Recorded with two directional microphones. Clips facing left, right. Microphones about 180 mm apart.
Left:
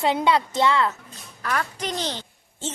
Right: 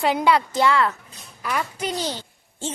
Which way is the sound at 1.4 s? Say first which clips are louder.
Right 1 dB; 10° right (ahead or behind).